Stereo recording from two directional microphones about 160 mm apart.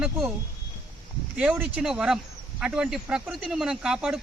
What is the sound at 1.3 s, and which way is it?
Speech, 5° right (ahead or behind).